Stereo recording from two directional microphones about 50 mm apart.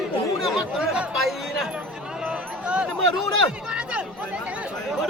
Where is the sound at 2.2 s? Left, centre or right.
Right.